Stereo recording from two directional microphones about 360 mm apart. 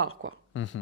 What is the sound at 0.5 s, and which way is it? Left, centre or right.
Speech, left.